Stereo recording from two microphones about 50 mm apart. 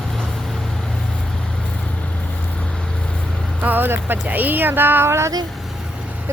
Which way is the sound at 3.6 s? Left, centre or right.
Right.